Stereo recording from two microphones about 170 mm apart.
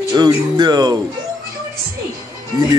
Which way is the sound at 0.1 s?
25° right (ahead or behind).